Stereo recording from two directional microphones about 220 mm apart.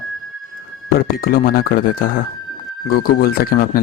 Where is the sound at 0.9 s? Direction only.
40° left (ahead or behind).